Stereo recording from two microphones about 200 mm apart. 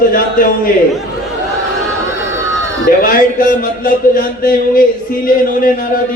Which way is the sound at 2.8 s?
45° left (ahead or behind).